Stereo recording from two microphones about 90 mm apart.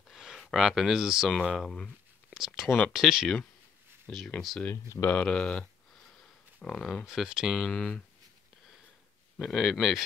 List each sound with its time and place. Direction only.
0.1 s a sound: 5° right (ahead or behind)
0.5 s speech: 5° right (ahead or behind)
1.3 s speech: 10° left (ahead or behind)
4.4 s speech: centre (ahead or behind)
4.6 s speech: 25° left (ahead or behind)
5.2 s speech: 10° left (ahead or behind)
7.1 s speech: 5° right (ahead or behind)
9.4 s speech: centre (ahead or behind)